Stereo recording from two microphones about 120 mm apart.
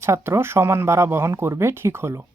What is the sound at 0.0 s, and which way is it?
Speech, 20° right (ahead or behind).